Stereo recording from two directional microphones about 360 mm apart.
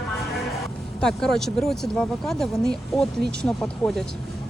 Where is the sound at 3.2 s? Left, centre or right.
Right.